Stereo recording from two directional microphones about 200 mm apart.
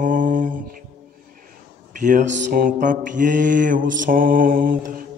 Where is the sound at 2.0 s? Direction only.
40° right (ahead or behind).